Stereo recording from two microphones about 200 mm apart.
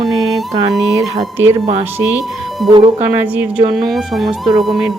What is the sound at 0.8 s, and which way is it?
Speech, 15° right (ahead or behind).